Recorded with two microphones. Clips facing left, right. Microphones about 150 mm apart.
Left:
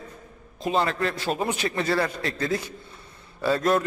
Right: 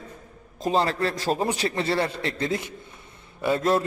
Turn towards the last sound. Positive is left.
turn(degrees=-25)  # may be behind; listen again after turning